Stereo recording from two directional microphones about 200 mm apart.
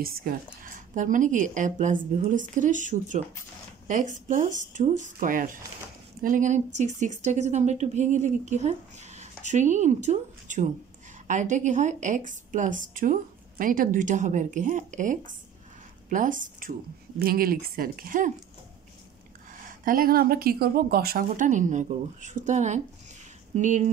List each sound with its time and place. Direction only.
0.0 s a woman's voice: 45° right (ahead or behind)
19.8 s a woman's voice: 45° right (ahead or behind)